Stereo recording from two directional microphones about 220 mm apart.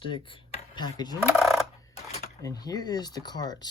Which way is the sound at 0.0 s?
25° left (ahead or behind).